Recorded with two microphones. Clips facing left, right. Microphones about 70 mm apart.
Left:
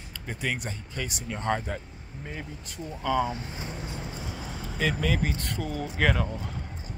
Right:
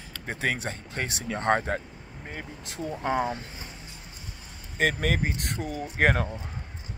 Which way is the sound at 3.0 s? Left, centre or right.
Right.